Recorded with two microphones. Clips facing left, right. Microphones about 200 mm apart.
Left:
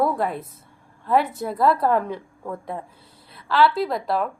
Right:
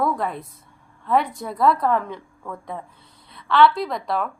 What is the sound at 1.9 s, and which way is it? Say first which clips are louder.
Speech: left 2 dB; 35° left (ahead or behind).